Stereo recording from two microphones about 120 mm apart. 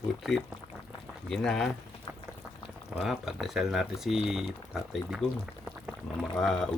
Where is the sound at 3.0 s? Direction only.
5° right (ahead or behind).